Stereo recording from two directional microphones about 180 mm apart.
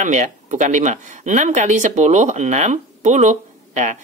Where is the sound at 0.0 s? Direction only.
40° right (ahead or behind).